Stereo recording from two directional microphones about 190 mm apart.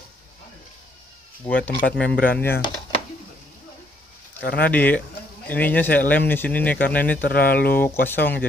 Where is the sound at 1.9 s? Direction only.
5° left (ahead or behind).